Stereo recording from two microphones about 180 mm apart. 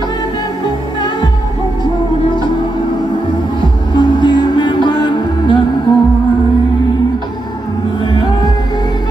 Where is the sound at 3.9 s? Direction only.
25° left (ahead or behind).